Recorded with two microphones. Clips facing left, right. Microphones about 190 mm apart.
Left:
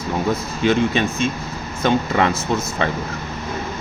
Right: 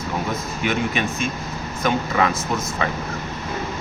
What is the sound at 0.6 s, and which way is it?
Speech, 30° left (ahead or behind).